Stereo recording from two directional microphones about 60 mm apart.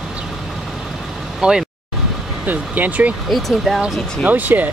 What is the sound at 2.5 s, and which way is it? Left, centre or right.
Speech, right.